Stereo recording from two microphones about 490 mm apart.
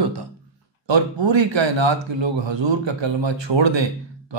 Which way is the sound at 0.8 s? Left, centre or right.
Right.